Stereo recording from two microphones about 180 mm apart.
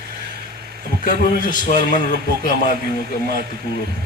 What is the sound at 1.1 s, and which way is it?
Speech, 50° left (ahead or behind).